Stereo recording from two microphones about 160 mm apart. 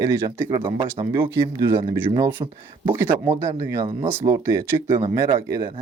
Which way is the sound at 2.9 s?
15° right (ahead or behind).